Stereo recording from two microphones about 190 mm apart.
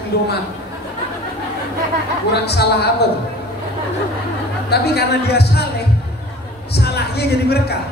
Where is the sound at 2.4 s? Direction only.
60° left (ahead or behind).